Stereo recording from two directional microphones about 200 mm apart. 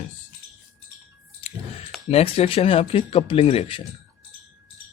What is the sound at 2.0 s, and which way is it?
Speech, 30° left (ahead or behind).